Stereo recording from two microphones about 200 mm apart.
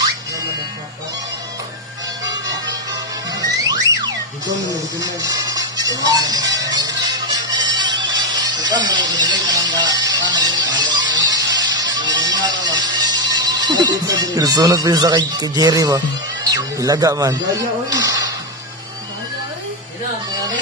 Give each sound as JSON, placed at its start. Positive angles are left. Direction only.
{"t": 2.2, "sound": "music", "side_deg": -20}
{"t": 3.6, "sound": "music", "side_deg": -20}
{"t": 13.3, "sound": "speech", "side_deg": -20}